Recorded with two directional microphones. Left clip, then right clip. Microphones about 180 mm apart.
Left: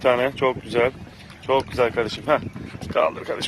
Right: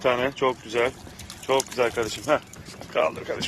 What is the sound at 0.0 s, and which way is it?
Speech, 5° left (ahead or behind).